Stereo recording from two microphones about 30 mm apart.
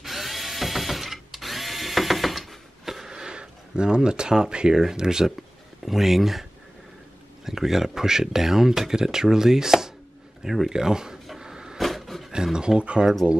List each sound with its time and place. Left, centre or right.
0.0 s drill: centre
3.1 s a sound: right
4.7 s speech: centre
5.9 s speech: centre
7.4 s speech: centre
10.7 s speech: right
11.3 s cupboard open or close: right
11.8 s a sound: centre
12.5 s speech: right